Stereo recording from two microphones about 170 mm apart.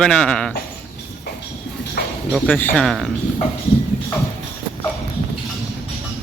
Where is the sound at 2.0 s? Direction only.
70° left (ahead or behind).